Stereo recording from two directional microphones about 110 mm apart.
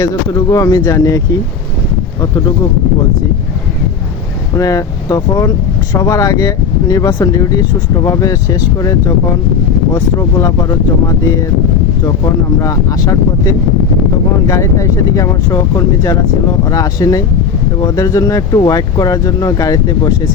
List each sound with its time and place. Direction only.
0.0 s speech: 30° left (ahead or behind)
4.5 s speech: 30° left (ahead or behind)
12.0 s speech: 35° left (ahead or behind)